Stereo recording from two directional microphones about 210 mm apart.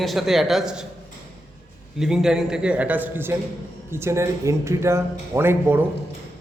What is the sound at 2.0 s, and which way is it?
A man's voice, centre (ahead or behind).